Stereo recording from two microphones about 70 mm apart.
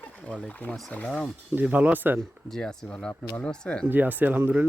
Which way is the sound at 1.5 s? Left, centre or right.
Right.